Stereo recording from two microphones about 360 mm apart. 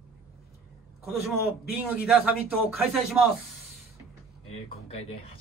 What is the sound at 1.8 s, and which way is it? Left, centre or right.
Speech, centre.